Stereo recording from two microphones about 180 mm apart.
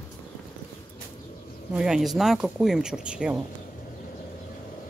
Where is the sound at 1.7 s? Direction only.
5° right (ahead or behind).